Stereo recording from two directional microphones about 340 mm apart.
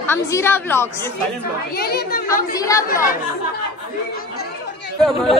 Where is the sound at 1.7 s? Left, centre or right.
Left.